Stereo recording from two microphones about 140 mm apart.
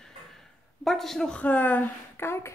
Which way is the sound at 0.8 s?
5° left (ahead or behind).